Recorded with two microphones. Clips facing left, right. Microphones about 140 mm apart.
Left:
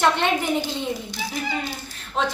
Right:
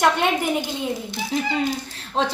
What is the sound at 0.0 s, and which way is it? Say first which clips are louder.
Speech: right 1 dB; 10° right (ahead or behind).